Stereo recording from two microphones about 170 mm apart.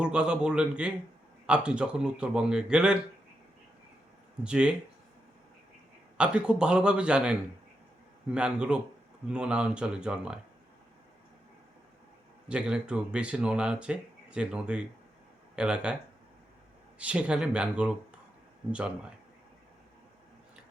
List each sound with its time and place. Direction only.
0.0 s speech: 5° right (ahead or behind)
4.4 s speech: 5° right (ahead or behind)
6.1 s speech: 5° right (ahead or behind)
12.5 s speech: 5° right (ahead or behind)
17.0 s speech: 5° right (ahead or behind)